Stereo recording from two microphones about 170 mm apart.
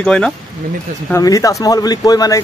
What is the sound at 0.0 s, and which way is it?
Speech, 5° left (ahead or behind).